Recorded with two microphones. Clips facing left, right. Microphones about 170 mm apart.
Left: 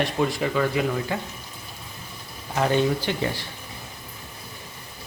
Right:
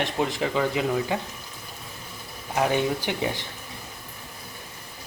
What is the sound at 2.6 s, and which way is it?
Speech, 10° right (ahead or behind).